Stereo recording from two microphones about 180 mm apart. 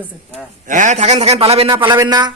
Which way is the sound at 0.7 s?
45° right (ahead or behind).